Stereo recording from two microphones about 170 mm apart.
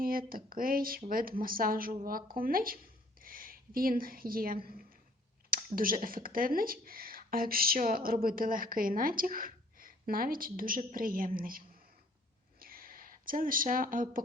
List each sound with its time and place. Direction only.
0.0 s a woman's voice: 60° right (ahead or behind)
5.7 s speech: 55° right (ahead or behind)
12.5 s a sound: 60° right (ahead or behind)